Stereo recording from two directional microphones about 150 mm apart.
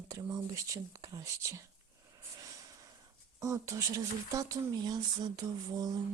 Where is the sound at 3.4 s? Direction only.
20° right (ahead or behind).